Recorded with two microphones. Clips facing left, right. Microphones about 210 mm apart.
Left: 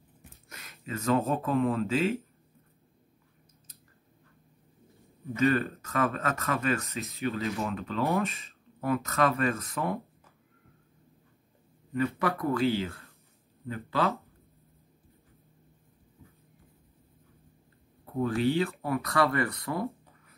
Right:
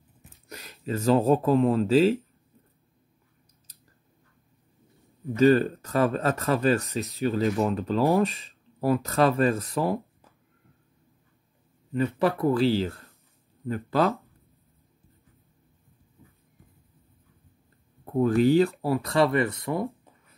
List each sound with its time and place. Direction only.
0.5 s speech: 30° right (ahead or behind)
5.3 s speech: 30° right (ahead or behind)
11.9 s speech: 30° right (ahead or behind)
13.7 s speech: 45° right (ahead or behind)
18.1 s speech: 40° right (ahead or behind); by 19.8 s 25° right (ahead or behind)